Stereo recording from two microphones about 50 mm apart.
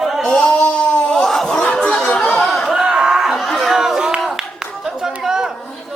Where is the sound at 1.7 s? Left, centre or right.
Left.